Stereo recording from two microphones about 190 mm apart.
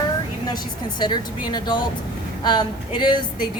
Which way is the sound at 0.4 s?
20° left (ahead or behind).